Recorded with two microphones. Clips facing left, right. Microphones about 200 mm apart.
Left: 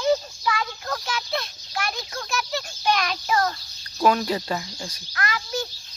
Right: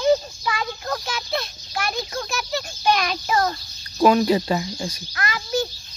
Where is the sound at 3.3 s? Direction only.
20° right (ahead or behind).